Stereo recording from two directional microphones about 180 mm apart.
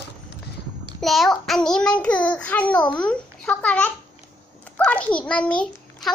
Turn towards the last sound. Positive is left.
turn(degrees=5)  # may be behind; listen again after turning